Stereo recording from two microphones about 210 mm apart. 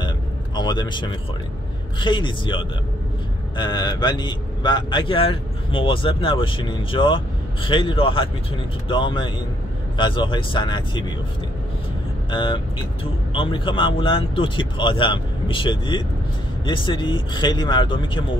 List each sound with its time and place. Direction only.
0.6 s a man's voice: 20° left (ahead or behind)
12.3 s a man's voice: 25° left (ahead or behind)